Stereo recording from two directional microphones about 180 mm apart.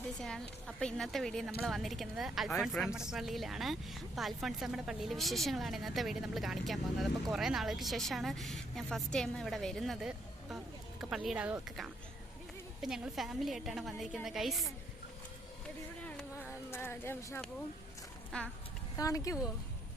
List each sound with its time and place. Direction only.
0.2 s speech: 5° left (ahead or behind)
16.0 s a sound: 10° left (ahead or behind)
18.3 s speech: 5° left (ahead or behind)
18.9 s speech: 20° left (ahead or behind)